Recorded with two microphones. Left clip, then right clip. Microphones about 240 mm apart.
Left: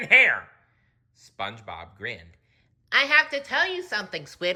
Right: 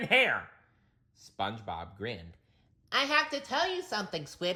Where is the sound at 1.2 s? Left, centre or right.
Centre.